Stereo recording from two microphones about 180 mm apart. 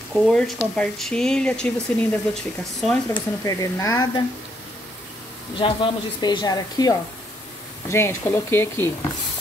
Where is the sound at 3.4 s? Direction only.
20° left (ahead or behind).